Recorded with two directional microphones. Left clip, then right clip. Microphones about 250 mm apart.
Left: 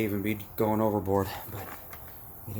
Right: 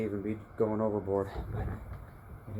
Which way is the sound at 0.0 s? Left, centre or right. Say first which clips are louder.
Left 4 dB; left.